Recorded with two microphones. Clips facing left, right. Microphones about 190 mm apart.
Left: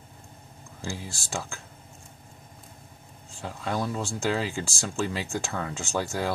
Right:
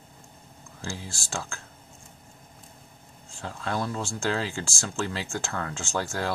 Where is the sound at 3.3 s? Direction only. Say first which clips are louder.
Even; 10° left (ahead or behind).